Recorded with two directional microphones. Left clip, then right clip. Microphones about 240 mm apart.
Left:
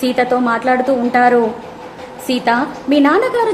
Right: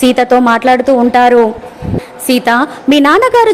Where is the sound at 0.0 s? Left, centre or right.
Right.